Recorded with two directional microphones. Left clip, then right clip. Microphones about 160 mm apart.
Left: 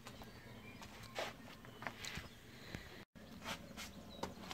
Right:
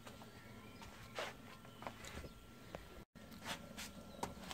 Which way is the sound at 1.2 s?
20° left (ahead or behind).